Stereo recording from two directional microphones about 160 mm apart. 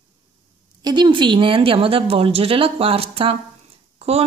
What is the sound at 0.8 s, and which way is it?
Speech, 30° right (ahead or behind).